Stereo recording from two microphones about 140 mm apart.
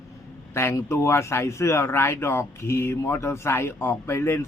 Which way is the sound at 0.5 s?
20° left (ahead or behind).